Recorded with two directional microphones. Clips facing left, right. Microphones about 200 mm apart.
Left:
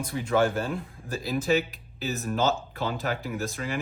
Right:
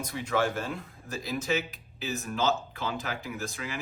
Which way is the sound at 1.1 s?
35° left (ahead or behind).